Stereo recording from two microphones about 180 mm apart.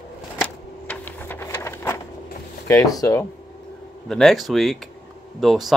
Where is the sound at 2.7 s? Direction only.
20° left (ahead or behind).